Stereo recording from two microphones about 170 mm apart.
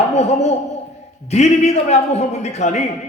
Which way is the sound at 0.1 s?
40° left (ahead or behind).